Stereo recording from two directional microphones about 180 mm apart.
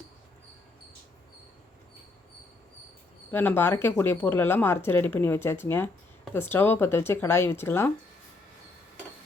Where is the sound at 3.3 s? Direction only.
10° left (ahead or behind).